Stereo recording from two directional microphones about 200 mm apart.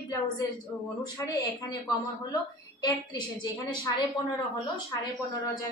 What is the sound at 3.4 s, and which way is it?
Speech, 20° left (ahead or behind).